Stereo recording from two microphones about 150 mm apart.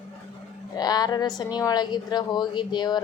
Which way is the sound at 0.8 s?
25° left (ahead or behind).